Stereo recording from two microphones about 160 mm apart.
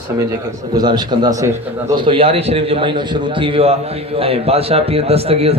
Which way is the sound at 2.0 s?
35° right (ahead or behind).